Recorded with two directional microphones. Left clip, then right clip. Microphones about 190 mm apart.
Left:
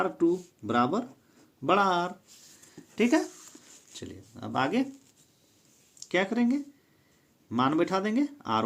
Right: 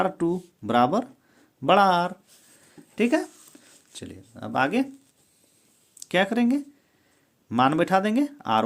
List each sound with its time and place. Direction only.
0.0 s speech: 40° right (ahead or behind)
2.9 s speech: 15° right (ahead or behind)
6.0 s speech: 35° right (ahead or behind)